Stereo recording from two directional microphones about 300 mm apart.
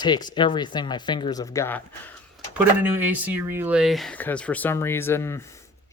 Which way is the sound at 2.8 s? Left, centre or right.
Centre.